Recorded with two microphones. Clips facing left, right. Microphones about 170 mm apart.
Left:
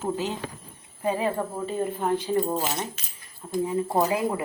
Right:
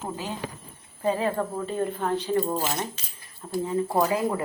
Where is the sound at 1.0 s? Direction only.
15° left (ahead or behind).